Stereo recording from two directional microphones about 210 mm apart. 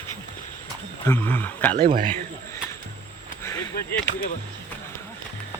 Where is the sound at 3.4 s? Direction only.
15° left (ahead or behind).